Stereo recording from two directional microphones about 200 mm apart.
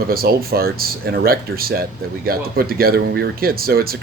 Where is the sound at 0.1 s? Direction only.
50° right (ahead or behind).